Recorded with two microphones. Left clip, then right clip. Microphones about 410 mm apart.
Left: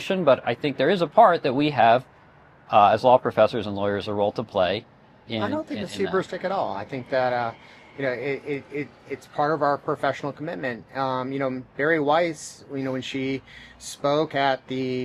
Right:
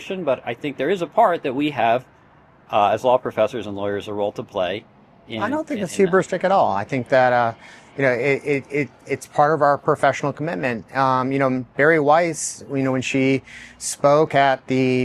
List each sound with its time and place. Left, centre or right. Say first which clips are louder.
0.0 s speech: left 3 dB; left
5.4 s a man's voice: right 5 dB; right